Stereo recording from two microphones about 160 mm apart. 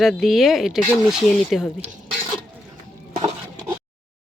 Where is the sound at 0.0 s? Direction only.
Centre (ahead or behind).